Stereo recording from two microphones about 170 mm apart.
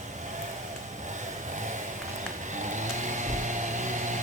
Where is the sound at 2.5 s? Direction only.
45° right (ahead or behind).